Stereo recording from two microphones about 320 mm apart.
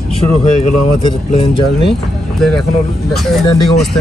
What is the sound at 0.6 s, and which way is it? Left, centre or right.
Speech, centre.